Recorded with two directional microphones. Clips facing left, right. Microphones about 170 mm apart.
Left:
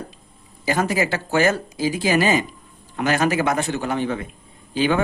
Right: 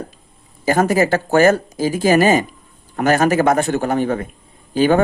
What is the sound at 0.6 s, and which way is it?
A man's voice, 45° right (ahead or behind).